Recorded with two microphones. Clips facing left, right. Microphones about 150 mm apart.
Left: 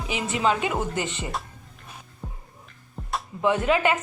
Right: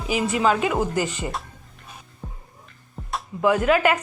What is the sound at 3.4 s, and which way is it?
Speech, 25° left (ahead or behind).